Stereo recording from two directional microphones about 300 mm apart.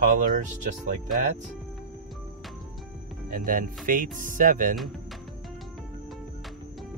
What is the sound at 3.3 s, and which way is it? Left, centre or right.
Speech, right.